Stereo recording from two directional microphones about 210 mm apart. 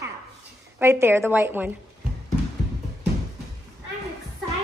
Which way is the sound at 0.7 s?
10° right (ahead or behind).